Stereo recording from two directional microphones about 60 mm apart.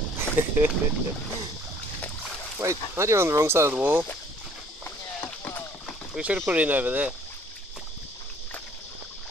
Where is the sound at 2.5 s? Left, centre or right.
Right.